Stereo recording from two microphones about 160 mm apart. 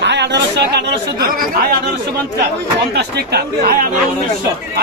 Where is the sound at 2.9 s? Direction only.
85° right.